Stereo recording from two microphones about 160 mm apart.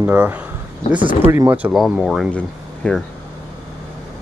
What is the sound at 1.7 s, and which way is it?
Speech, centre (ahead or behind).